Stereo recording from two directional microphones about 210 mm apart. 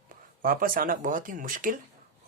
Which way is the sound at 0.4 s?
45° right (ahead or behind).